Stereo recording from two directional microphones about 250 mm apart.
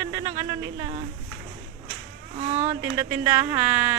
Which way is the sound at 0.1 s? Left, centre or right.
Centre.